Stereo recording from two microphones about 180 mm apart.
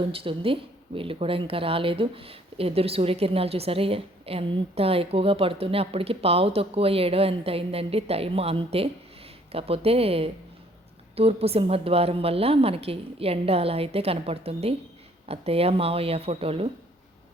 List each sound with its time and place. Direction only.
0.1 s speech: 30° right (ahead or behind)